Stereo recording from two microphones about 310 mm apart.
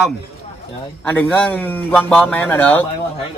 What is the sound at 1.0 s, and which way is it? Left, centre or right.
A man's voice, centre.